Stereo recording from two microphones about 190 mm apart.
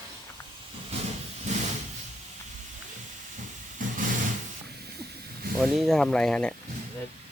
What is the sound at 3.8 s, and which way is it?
Vehicle, 45° right (ahead or behind).